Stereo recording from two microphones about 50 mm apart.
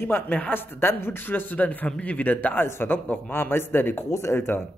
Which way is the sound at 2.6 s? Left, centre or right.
Left.